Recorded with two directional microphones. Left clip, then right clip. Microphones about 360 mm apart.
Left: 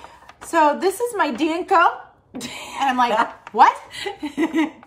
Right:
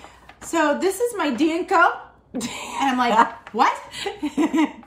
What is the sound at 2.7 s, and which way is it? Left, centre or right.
Speech, centre.